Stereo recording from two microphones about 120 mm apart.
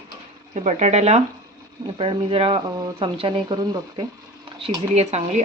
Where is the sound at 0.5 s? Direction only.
75° right (ahead or behind).